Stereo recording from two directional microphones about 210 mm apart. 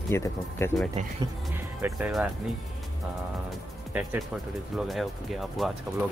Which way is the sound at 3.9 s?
5° right (ahead or behind).